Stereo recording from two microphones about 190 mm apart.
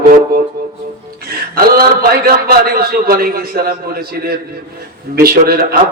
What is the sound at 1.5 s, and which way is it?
A man's voice, 50° right (ahead or behind).